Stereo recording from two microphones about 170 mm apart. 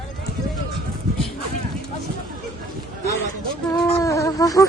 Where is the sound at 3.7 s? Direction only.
20° left (ahead or behind).